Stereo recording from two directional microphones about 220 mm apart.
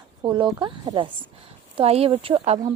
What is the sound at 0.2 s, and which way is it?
A woman's voice, 20° right (ahead or behind).